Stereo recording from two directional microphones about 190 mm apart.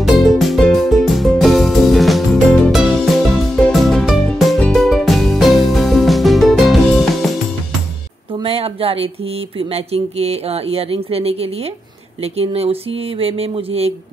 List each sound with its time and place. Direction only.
0.0 s music: centre (ahead or behind)
8.4 s speech: 30° right (ahead or behind)